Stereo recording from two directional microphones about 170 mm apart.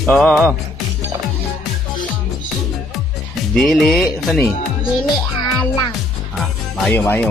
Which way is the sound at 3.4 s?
Centre (ahead or behind).